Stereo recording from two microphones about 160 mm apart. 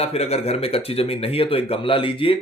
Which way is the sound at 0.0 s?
40° left (ahead or behind).